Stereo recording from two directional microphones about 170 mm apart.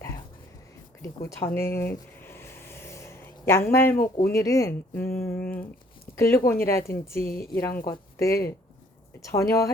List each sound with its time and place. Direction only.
1.0 s speech: 20° left (ahead or behind)
2.2 s a sound: 15° left (ahead or behind)
3.7 s speech: 15° left (ahead or behind)
3.9 s speech: 55° left (ahead or behind)
4.3 s speech: 20° left (ahead or behind)